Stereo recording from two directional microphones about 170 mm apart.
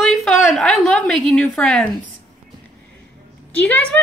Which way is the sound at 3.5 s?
10° left (ahead or behind).